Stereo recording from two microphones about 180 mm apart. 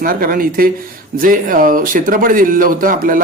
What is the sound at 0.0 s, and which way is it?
Speech, 55° right (ahead or behind).